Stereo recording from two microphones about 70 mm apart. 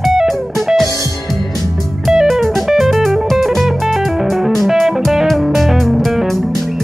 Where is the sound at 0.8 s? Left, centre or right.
Left.